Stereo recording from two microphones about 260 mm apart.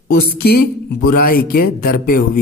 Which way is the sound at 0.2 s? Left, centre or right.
Left.